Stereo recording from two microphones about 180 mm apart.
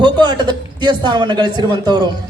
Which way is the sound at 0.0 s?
25° right (ahead or behind).